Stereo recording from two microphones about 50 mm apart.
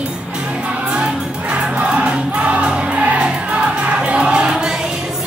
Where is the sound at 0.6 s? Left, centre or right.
Centre.